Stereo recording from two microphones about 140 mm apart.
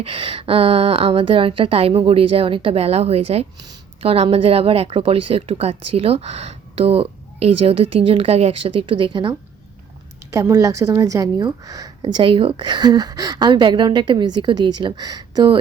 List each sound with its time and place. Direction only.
0.0 s speech: 40° right (ahead or behind)
8.9 s a woman's voice: 35° right (ahead or behind)
10.3 s a woman's voice: 25° right (ahead or behind)